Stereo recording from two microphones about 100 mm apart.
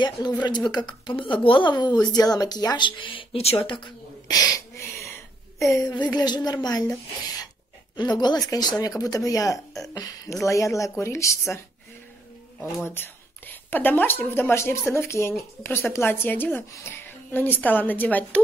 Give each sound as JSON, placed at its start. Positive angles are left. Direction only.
{"t": 0.4, "sound": "speech", "side_deg": 45}
{"t": 4.3, "sound": "a sound", "side_deg": 35}
{"t": 5.7, "sound": "speech", "side_deg": 35}
{"t": 5.9, "sound": "speech", "side_deg": 45}
{"t": 7.9, "sound": "speech", "side_deg": 45}
{"t": 12.8, "sound": "a woman's voice", "side_deg": 20}